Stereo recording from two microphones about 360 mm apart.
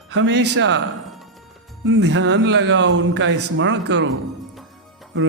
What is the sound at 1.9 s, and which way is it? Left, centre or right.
Speech, right.